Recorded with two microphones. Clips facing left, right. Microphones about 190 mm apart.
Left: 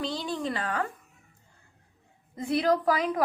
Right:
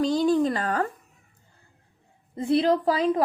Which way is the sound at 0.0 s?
45° right (ahead or behind).